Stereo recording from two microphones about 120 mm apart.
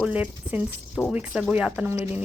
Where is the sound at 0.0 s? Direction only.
15° right (ahead or behind).